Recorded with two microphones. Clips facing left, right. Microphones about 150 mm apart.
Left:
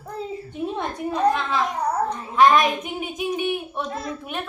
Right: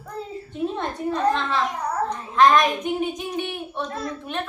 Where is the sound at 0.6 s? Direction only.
10° left (ahead or behind).